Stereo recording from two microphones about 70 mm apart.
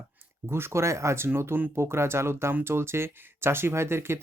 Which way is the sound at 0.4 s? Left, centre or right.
Right.